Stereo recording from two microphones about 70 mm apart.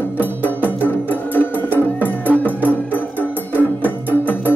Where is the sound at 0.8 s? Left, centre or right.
Left.